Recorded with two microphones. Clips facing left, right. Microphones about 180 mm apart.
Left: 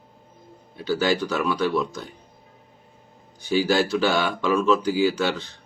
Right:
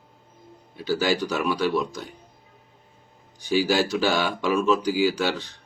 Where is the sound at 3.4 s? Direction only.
15° right (ahead or behind).